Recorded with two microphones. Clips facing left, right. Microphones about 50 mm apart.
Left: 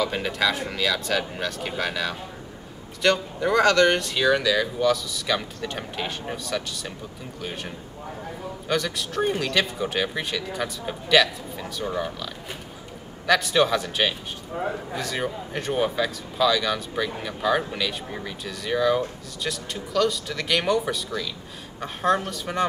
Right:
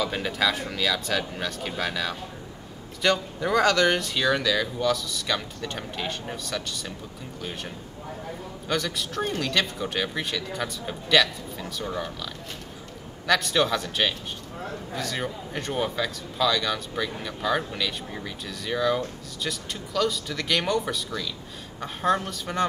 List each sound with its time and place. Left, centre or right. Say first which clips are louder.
0.0 s speech: left 1 dB; centre
8.6 s speech: left 2 dB; centre
13.3 s speech: left 3 dB; centre
14.5 s a man's voice: left 8 dB; centre
15.0 s speech: right 2 dB; centre